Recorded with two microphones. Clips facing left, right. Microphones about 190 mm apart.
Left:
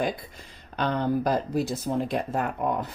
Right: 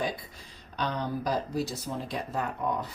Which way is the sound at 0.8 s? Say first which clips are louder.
Left 6 dB; 55° left (ahead or behind).